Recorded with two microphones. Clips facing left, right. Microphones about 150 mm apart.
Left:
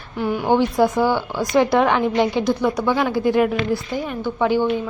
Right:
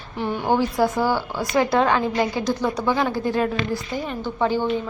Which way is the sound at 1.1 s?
10° right (ahead or behind).